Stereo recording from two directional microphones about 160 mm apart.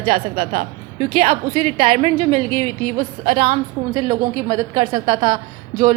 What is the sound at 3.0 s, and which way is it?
Speech, 55° right (ahead or behind).